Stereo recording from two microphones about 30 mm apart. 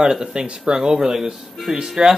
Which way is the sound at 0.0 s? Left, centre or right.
Right.